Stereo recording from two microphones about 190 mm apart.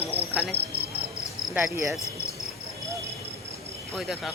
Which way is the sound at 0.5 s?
55° right (ahead or behind).